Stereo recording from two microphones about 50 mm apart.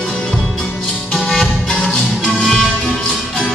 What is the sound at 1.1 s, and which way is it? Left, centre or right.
Music, centre.